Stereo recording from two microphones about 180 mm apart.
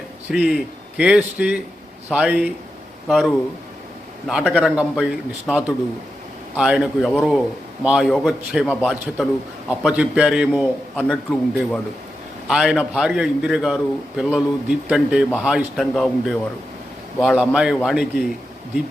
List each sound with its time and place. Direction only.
0.3 s a man's voice: 5° right (ahead or behind)